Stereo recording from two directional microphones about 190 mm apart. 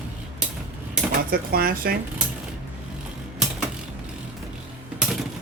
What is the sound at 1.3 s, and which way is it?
Speech, 55° right (ahead or behind).